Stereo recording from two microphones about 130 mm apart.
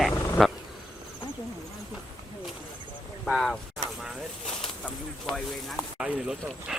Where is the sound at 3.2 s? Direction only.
Centre (ahead or behind).